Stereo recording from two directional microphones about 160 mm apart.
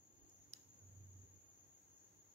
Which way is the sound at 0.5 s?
40° right (ahead or behind).